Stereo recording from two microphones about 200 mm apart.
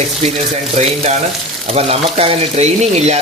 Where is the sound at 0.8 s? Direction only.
35° right (ahead or behind).